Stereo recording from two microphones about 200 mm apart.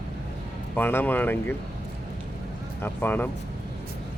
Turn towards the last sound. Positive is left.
turn(degrees=10)  # may be behind; listen again after turning